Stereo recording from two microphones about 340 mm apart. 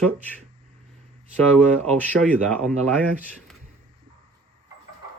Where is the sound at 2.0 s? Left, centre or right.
Centre.